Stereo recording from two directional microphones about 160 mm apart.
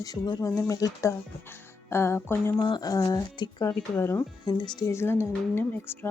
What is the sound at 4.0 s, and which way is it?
Speech, 15° left (ahead or behind).